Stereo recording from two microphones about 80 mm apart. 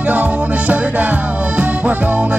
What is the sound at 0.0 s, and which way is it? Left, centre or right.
Music, centre.